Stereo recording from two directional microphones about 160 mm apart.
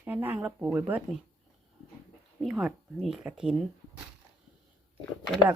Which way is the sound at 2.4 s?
Centre (ahead or behind).